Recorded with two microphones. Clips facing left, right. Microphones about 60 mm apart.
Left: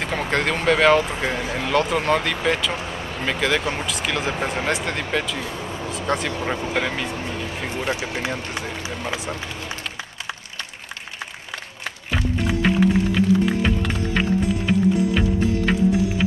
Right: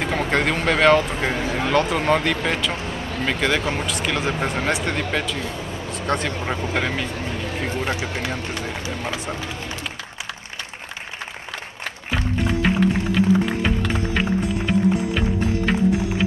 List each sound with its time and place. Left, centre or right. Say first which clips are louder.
0.0 s speech: right 2 dB; centre
7.9 s speech: even; centre
9.1 s speech: even; centre
12.4 s music: left 1 dB; centre